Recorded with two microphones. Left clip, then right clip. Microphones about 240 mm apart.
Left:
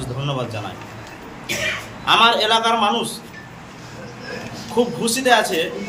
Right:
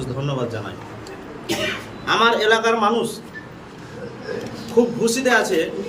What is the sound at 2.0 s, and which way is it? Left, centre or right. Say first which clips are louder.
A man's voice: left 2 dB; centre.